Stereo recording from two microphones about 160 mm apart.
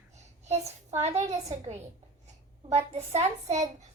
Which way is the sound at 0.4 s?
45° right (ahead or behind).